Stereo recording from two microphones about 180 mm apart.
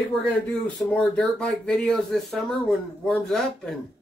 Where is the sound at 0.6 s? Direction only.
5° left (ahead or behind).